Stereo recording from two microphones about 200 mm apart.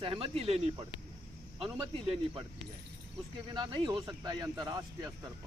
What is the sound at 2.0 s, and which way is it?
Speech, 30° right (ahead or behind).